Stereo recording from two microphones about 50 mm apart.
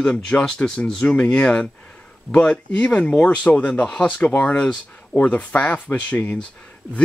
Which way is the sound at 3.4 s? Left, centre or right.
Left.